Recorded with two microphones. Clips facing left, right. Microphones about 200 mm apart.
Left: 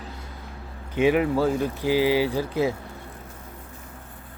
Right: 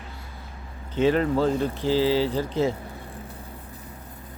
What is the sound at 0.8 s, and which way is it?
Speech, 10° left (ahead or behind).